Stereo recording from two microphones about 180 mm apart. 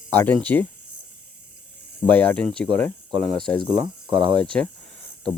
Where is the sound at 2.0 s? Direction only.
10° left (ahead or behind).